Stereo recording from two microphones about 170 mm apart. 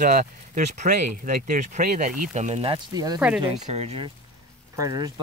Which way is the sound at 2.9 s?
20° right (ahead or behind).